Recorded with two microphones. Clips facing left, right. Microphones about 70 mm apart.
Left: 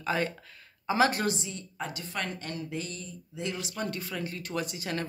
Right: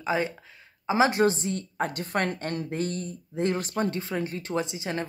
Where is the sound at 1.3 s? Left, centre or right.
Right.